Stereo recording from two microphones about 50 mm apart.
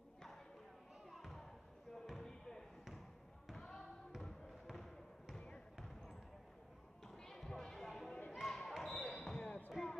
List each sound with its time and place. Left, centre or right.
1.1 s children playing: centre
2.0 s basketball bounce: centre
7.1 s a sound: centre
8.4 s basketball bounce: centre
9.4 s basketball bounce: left
9.7 s basketball bounce: centre